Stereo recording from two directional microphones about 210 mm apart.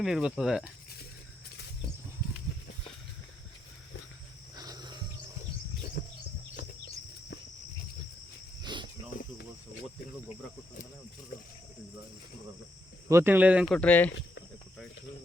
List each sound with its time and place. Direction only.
0.0 s speech: 5° right (ahead or behind)
4.5 s wild animals: 20° right (ahead or behind)
6.0 s bird: 40° left (ahead or behind)
8.6 s cricket: 20° right (ahead or behind)
13.1 s speech: 10° right (ahead or behind)
13.7 s speech: 5° left (ahead or behind)
14.1 s speech: 60° left (ahead or behind)